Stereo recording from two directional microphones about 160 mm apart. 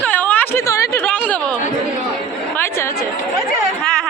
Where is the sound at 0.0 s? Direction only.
10° left (ahead or behind).